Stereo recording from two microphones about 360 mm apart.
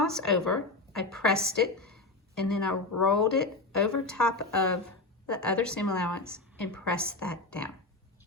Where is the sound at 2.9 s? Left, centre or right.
Left.